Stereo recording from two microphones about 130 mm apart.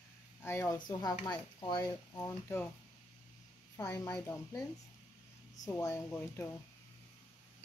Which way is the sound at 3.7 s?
25° left (ahead or behind).